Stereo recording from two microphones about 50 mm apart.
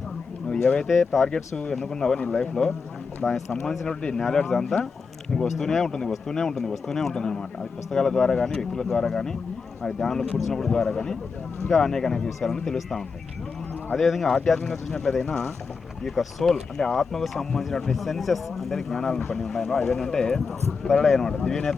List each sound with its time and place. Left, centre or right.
0.4 s a sound: centre
0.9 s speech: centre
1.3 s speech: centre